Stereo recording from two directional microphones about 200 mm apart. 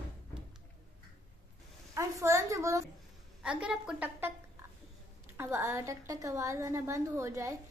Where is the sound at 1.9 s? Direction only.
15° right (ahead or behind).